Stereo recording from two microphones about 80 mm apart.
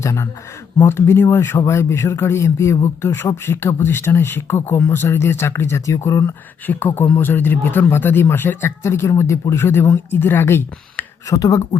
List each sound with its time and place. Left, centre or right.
0.0 s speech: left
6.7 s speech: left
11.3 s speech: left